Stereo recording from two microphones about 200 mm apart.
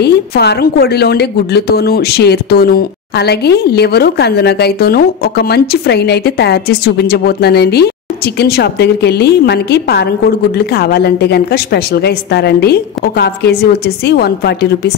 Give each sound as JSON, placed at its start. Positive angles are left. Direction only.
{"t": 0.0, "sound": "a woman's voice", "side_deg": 55}